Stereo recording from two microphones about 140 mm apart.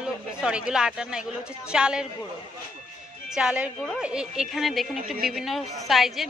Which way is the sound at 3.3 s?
5° right (ahead or behind).